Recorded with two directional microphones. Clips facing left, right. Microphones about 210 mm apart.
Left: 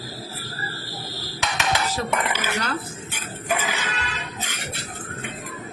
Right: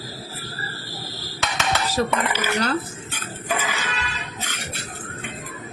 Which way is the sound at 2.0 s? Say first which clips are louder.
Right 3 dB; 35° right (ahead or behind).